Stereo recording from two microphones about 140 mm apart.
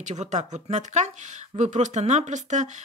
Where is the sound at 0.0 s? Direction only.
55° right (ahead or behind).